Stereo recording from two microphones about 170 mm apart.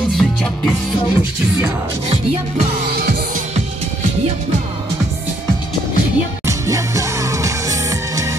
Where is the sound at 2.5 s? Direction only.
55° right (ahead or behind).